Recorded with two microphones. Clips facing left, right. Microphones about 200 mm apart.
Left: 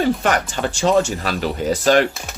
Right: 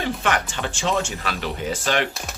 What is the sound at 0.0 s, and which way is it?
Speech, 40° left (ahead or behind).